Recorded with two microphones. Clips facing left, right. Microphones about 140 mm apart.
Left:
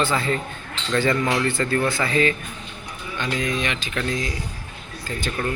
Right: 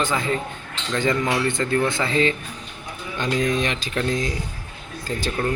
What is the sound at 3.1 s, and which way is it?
Speech, 35° right (ahead or behind).